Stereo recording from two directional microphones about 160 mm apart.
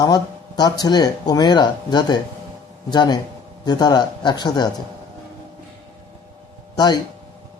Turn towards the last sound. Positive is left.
turn(degrees=25)  # may be behind; listen again after turning